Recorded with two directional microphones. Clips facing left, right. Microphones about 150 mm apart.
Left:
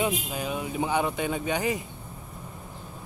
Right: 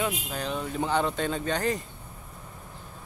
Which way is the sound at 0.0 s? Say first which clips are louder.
Left 2 dB; 10° left (ahead or behind).